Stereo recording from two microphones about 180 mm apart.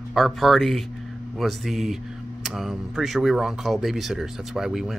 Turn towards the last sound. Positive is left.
turn(degrees=0)  # may be behind; listen again after turning